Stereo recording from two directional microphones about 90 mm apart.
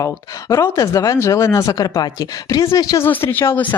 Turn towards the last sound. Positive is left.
turn(degrees=25)  # may be behind; listen again after turning